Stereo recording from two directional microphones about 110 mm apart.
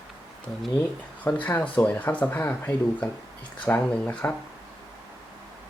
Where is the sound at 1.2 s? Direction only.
15° left (ahead or behind).